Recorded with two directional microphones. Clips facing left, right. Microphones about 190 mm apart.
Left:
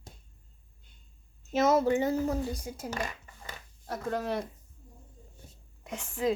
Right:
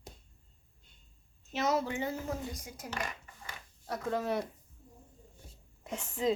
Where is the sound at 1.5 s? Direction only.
45° left (ahead or behind); by 2.9 s 30° left (ahead or behind).